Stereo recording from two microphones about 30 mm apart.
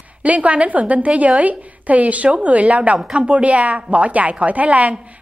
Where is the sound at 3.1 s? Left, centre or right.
Right.